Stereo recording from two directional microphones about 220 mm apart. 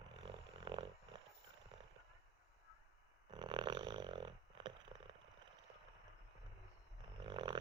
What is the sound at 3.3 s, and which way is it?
Snoring, 20° right (ahead or behind).